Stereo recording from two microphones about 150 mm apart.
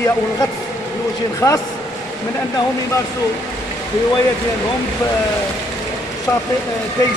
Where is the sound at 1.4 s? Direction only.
10° left (ahead or behind).